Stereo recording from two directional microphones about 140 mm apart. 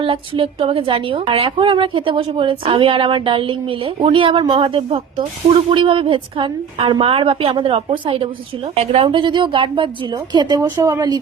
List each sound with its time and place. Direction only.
0.0 s a woman's voice: 40° right (ahead or behind)